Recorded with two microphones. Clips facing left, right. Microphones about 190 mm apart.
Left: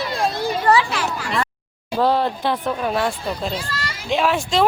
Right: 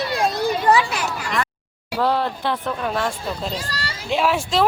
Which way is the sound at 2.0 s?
15° left (ahead or behind).